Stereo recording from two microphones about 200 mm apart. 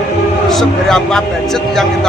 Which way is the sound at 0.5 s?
Centre (ahead or behind).